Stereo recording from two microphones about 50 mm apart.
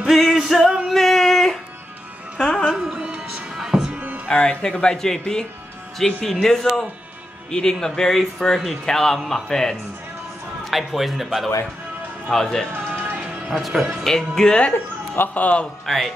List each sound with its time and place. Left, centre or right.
0.1 s music: centre
0.8 s a sound: centre
2.7 s speech: centre
3.5 s music: centre
4.3 s speech: centre
10.6 s a man's voice: centre
12.3 s speech: centre
12.7 s music: right
13.5 s a man's voice: centre
14.0 s speech: centre
15.1 s a man's voice: left
15.8 s a man's voice: centre